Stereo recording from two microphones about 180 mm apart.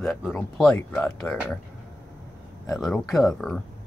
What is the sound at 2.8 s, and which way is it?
Speech, centre (ahead or behind).